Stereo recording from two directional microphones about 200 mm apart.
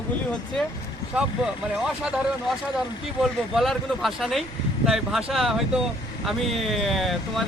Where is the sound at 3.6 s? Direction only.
Centre (ahead or behind).